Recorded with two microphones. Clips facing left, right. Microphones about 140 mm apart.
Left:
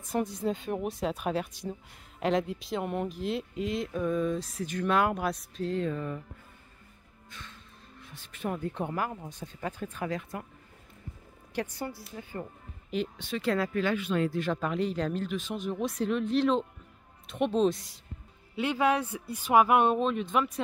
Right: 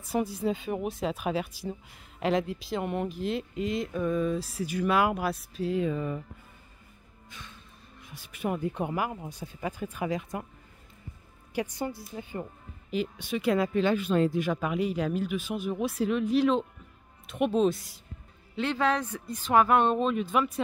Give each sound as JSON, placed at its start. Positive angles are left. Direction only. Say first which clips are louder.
{"t": 0.1, "sound": "speech", "louder": "right 2 dB", "side_deg": -5}
{"t": 7.2, "sound": "music", "louder": "even", "side_deg": -10}
{"t": 8.0, "sound": "speech", "louder": "right 3 dB", "side_deg": -10}
{"t": 11.5, "sound": "speech", "louder": "right 3 dB", "side_deg": -15}
{"t": 12.9, "sound": "speech", "louder": "right 1 dB", "side_deg": -5}
{"t": 13.3, "sound": "speech", "louder": "right 3 dB", "side_deg": -15}
{"t": 13.9, "sound": "speech", "louder": "right 3 dB", "side_deg": -40}
{"t": 14.3, "sound": "speech", "louder": "right 2 dB", "side_deg": -10}
{"t": 18.6, "sound": "speech", "louder": "left 1 dB", "side_deg": 10}
{"t": 20.0, "sound": "speech", "louder": "right 1 dB", "side_deg": 0}